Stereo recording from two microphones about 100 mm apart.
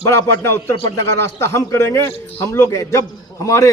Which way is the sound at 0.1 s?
25° left (ahead or behind).